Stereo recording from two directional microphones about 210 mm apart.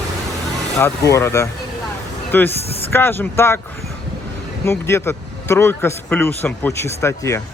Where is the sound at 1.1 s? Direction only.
15° left (ahead or behind).